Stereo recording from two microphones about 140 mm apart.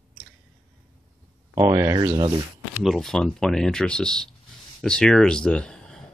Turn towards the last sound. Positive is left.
turn(degrees=5)  # may be behind; listen again after turning